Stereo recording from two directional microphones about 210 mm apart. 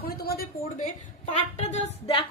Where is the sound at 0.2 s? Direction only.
45° left (ahead or behind).